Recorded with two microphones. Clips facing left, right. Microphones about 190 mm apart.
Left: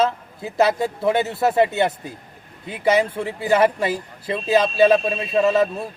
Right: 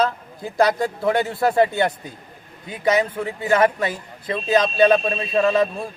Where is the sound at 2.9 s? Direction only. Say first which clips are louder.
Left 2 dB; 25° left (ahead or behind).